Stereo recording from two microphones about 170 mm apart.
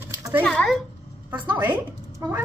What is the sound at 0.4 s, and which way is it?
Speech, 5° left (ahead or behind).